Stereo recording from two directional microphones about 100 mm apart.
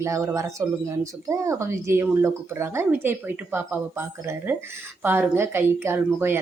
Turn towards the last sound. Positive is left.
turn(degrees=-25)  # may be behind; listen again after turning